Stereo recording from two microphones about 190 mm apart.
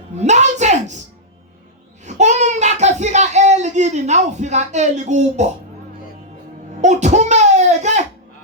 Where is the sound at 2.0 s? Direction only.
40° right (ahead or behind).